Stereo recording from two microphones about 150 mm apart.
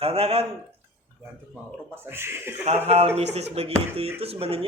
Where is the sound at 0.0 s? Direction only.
40° right (ahead or behind).